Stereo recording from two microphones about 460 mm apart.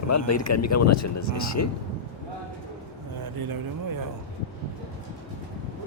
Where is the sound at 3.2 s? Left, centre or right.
Right.